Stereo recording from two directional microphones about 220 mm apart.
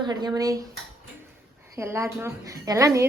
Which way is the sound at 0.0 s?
20° right (ahead or behind).